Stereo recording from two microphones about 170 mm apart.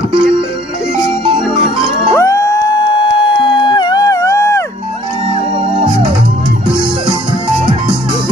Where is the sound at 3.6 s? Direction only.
25° left (ahead or behind).